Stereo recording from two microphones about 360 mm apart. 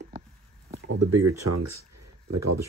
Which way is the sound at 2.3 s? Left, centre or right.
Right.